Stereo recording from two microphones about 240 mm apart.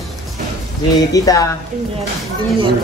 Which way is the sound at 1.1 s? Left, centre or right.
Centre.